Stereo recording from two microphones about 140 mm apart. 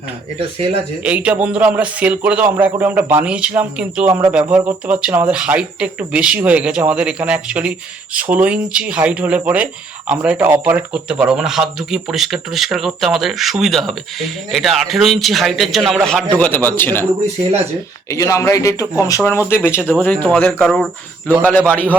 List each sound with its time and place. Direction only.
1.0 s speech: 10° right (ahead or behind)
16.3 s a man's voice: 10° left (ahead or behind)
18.1 s a man's voice: 20° left (ahead or behind)